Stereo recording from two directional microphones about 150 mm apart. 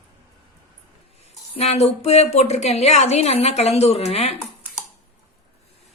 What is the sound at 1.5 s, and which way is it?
A woman's voice, 45° left (ahead or behind).